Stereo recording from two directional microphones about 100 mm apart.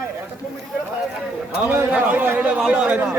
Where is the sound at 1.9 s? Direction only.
15° right (ahead or behind).